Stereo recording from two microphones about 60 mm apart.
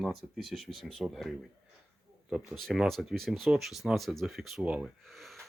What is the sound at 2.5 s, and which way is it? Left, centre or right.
Speech, centre.